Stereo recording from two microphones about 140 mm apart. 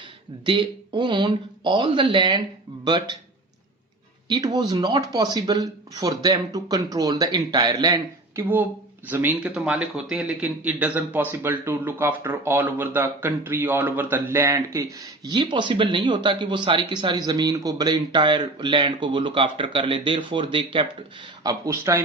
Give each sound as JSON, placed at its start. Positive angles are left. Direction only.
{"t": 0.4, "sound": "speech", "side_deg": -35}
{"t": 4.3, "sound": "speech", "side_deg": -30}
{"t": 9.0, "sound": "speech", "side_deg": -15}
{"t": 21.4, "sound": "speech", "side_deg": -20}